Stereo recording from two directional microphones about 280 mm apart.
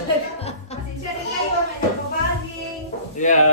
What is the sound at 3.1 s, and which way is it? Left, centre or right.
Speech, left.